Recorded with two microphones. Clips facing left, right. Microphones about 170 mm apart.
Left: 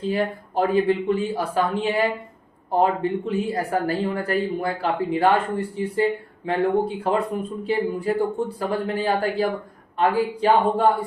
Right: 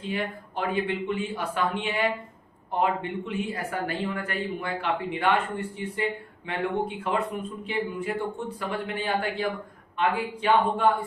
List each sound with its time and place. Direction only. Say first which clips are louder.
0.0 s speech: left 7 dB; 35° left (ahead or behind)